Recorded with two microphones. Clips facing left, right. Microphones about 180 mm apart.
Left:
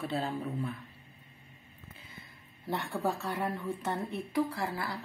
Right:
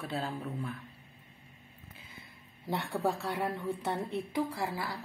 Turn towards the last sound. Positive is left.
turn(degrees=-15)  # may be behind; listen again after turning